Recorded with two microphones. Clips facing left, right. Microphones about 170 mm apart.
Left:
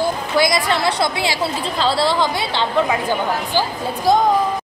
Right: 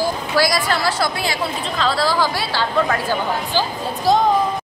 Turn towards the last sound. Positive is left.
turn(degrees=15)  # may be behind; listen again after turning